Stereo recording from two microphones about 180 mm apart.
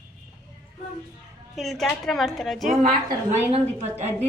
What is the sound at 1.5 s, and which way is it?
A woman's voice, centre (ahead or behind).